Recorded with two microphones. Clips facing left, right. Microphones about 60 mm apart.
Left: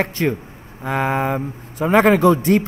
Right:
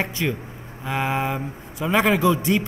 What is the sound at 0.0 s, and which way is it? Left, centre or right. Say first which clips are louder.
A man's voice: left 5 dB; left.